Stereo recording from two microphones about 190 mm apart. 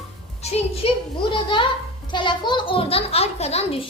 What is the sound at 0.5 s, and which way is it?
A woman's voice, 30° left (ahead or behind).